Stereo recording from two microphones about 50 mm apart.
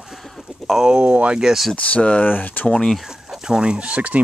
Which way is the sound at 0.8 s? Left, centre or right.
Right.